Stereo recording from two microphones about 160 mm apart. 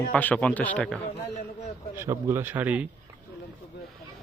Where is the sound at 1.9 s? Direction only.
15° right (ahead or behind).